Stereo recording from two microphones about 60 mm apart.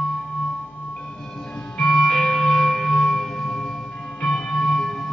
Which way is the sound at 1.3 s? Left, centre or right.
Centre.